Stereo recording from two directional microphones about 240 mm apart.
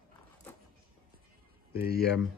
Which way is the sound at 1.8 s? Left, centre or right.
Left.